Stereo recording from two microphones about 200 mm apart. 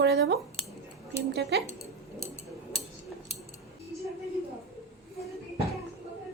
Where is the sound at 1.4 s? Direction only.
55° right (ahead or behind).